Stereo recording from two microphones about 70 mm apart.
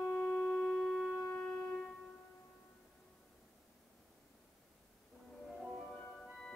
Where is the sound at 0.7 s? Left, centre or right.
Centre.